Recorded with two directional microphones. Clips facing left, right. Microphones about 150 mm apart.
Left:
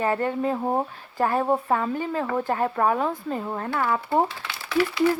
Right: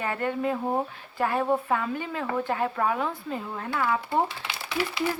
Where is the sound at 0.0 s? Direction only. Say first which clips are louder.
Left 4 dB; 35° left (ahead or behind).